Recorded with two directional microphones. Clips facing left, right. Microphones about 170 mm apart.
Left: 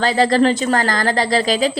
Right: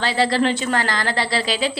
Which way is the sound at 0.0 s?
45° left (ahead or behind).